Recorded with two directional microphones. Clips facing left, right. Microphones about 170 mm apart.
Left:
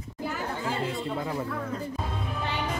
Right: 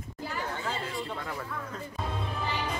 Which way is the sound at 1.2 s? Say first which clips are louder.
Left 6 dB; 20° left (ahead or behind).